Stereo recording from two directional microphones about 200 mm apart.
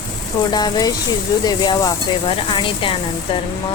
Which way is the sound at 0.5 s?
20° left (ahead or behind).